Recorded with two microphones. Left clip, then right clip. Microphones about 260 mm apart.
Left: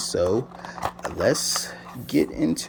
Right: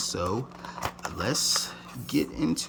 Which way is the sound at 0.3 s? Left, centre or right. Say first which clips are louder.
Left 7 dB; centre.